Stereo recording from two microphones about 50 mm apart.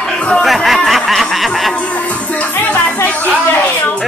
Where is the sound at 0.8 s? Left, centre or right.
Centre.